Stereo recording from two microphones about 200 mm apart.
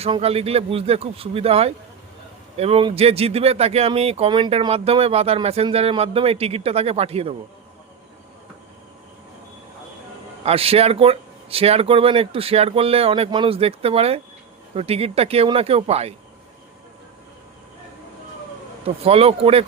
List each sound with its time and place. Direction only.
0.0 s speech: 30° right (ahead or behind)
10.4 s speech: 30° right (ahead or behind)
19.0 s speech: 30° right (ahead or behind)